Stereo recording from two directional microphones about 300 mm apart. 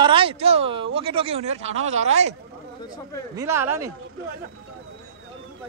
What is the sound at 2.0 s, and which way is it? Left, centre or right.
Speech, right.